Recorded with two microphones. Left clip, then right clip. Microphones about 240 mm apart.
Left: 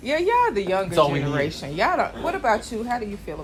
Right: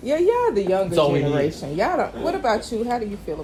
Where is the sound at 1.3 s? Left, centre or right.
Left.